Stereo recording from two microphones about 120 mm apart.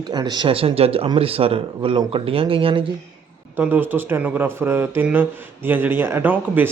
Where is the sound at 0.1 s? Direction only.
35° right (ahead or behind).